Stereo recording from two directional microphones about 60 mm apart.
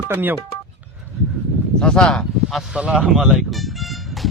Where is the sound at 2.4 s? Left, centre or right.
Centre.